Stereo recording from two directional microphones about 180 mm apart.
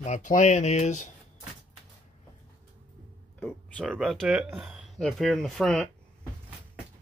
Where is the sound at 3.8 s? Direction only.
Centre (ahead or behind).